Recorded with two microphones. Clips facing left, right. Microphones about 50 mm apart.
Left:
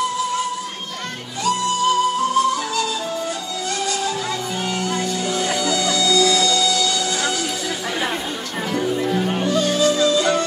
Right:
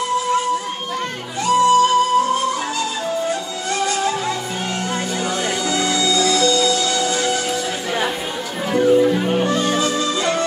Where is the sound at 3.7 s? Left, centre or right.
Right.